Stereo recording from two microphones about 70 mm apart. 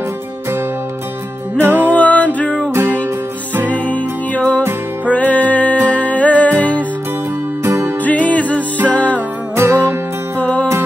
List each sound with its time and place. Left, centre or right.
1.6 s music: right
1.9 s music: left
2.7 s music: right
3.7 s music: left
7.6 s music: right
8.0 s music: left
9.6 s music: right
10.3 s music: centre